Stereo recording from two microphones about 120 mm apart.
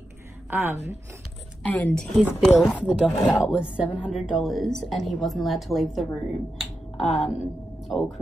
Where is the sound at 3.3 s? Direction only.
5° right (ahead or behind).